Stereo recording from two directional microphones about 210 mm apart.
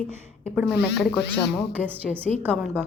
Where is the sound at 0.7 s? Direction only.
55° left (ahead or behind).